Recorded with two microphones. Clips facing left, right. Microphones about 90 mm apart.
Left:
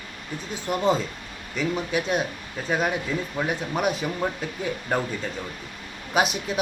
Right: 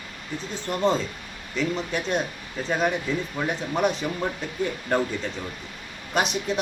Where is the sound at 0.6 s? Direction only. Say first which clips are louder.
Left 1 dB; 10° left (ahead or behind).